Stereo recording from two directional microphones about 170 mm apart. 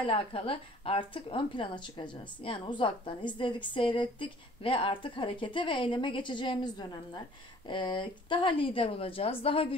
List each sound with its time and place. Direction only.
0.0 s a woman's voice: 30° left (ahead or behind)